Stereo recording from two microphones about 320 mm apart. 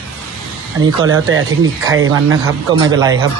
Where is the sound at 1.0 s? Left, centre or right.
Right.